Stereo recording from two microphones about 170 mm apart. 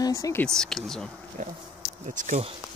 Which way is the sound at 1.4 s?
45° right (ahead or behind).